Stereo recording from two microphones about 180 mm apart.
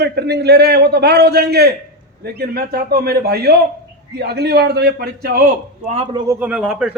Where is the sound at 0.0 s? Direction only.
65° right (ahead or behind).